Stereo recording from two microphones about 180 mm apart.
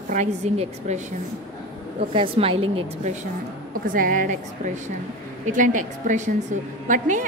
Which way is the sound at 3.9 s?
50° right (ahead or behind).